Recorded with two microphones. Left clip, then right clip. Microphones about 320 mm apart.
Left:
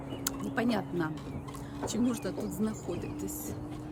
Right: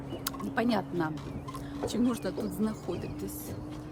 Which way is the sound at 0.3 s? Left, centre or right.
Centre.